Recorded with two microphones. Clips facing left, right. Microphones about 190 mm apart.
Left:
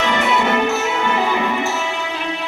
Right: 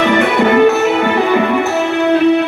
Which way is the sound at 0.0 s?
60° right (ahead or behind).